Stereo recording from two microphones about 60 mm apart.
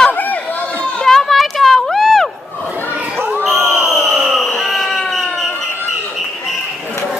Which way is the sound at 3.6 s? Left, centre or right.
Right.